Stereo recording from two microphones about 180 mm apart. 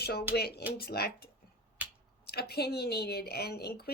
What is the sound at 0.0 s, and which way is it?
A woman's voice, 60° left (ahead or behind).